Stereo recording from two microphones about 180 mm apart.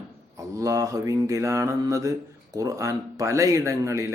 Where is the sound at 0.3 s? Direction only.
15° right (ahead or behind).